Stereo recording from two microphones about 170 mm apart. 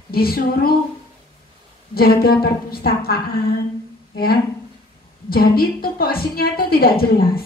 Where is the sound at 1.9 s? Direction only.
60° left (ahead or behind).